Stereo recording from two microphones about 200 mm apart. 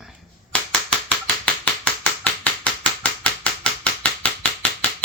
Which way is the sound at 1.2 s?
5° left (ahead or behind).